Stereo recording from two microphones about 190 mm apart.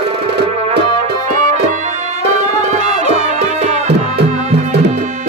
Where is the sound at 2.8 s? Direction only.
40° right (ahead or behind).